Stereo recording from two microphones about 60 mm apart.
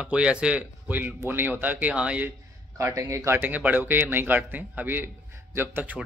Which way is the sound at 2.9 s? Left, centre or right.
Right.